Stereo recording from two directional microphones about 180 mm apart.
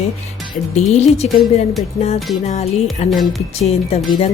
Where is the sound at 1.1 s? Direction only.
35° left (ahead or behind).